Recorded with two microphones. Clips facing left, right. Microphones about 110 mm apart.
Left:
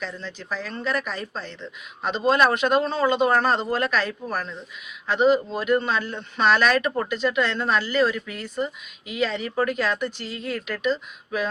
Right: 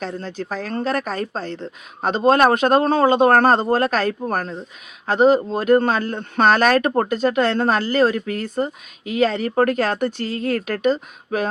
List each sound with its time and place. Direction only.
0.0 s speech: 45° right (ahead or behind)